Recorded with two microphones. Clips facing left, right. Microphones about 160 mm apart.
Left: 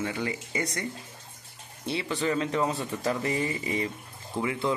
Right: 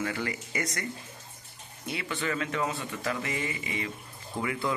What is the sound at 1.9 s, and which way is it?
A man's voice, 30° left (ahead or behind).